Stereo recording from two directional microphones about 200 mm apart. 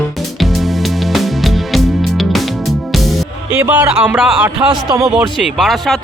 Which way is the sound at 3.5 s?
10° right (ahead or behind).